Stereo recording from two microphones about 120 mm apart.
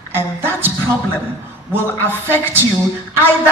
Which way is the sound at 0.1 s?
20° right (ahead or behind).